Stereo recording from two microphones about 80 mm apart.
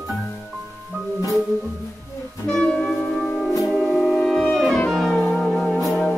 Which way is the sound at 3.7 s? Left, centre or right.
Centre.